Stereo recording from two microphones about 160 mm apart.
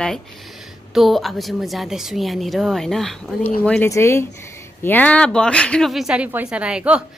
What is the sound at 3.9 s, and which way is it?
A woman's voice, 15° left (ahead or behind).